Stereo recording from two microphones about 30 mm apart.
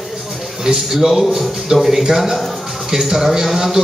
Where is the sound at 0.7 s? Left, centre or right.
Centre.